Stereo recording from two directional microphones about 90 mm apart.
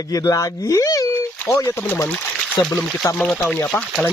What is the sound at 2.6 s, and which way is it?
Speech, 55° left (ahead or behind).